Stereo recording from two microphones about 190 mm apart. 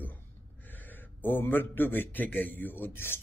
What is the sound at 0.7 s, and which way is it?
A man's voice, 10° left (ahead or behind).